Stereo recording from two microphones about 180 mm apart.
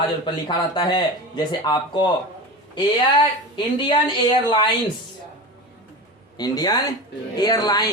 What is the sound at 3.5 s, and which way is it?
Speech, 25° left (ahead or behind).